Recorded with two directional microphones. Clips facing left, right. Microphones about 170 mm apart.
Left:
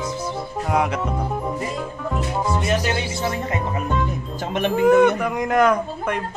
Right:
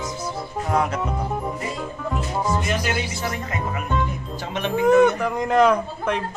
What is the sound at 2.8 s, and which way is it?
Speech, 25° left (ahead or behind).